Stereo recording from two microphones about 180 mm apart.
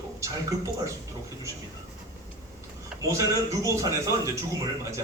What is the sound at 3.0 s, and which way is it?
A man's voice, 15° right (ahead or behind).